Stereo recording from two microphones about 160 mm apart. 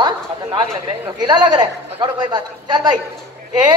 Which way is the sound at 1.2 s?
25° right (ahead or behind).